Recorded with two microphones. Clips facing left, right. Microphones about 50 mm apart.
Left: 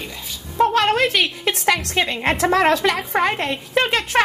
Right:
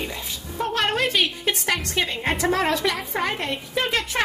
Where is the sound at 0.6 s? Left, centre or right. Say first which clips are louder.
Left 7 dB; left.